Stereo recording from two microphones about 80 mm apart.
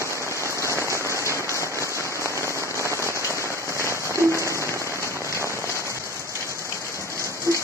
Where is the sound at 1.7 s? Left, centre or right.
Right.